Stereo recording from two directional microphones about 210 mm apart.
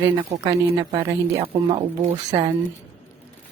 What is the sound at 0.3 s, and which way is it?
Speech, 15° right (ahead or behind).